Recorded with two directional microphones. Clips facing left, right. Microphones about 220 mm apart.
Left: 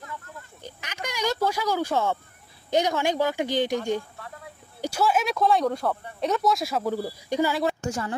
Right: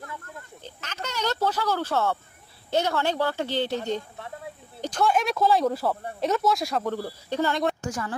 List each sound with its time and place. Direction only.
0.6 s a sound: 10° left (ahead or behind)
2.7 s speech: 15° left (ahead or behind)
7.8 s a woman's voice: 25° left (ahead or behind)